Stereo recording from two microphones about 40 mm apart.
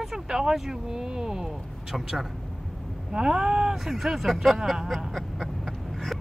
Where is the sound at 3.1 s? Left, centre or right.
Centre.